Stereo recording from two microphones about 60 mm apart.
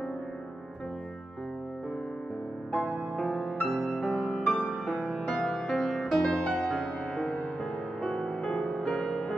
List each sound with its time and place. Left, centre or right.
3.2 s music: centre
3.5 s music: centre
4.0 s music: centre